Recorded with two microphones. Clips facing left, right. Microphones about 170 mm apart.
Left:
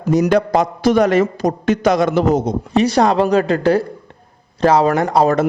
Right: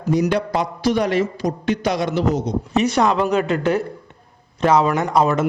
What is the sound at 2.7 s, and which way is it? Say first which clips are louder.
A man's voice: left 4 dB; 35° left (ahead or behind).